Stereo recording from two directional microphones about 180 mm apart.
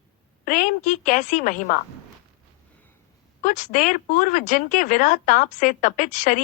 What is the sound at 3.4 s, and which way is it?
Speech, 45° left (ahead or behind).